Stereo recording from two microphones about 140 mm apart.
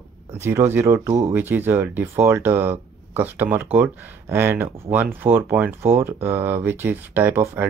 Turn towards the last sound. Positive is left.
turn(degrees=-15)  # may be behind; listen again after turning